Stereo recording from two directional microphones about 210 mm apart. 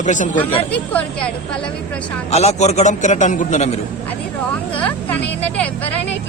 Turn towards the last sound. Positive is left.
turn(degrees=5)  # may be behind; listen again after turning